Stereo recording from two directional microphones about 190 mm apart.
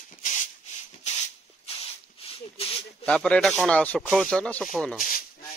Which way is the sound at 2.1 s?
30° left (ahead or behind).